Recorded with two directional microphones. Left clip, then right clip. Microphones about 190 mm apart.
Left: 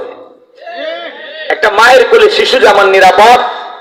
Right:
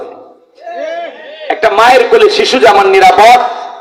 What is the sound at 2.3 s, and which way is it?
Speech, 40° right (ahead or behind).